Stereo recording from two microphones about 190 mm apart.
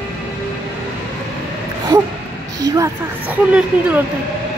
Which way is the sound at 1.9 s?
15° right (ahead or behind).